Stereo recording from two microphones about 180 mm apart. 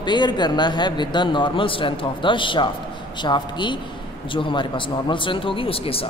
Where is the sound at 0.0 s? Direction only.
25° left (ahead or behind).